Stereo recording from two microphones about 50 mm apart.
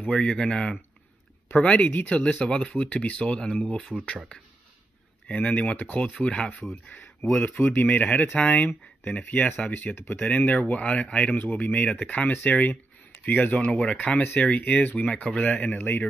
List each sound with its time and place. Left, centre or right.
0.1 s speech: centre
1.5 s speech: left
3.9 s speech: right
5.3 s speech: left
6.1 s speech: centre; by 8.0 s left
8.0 s speech: left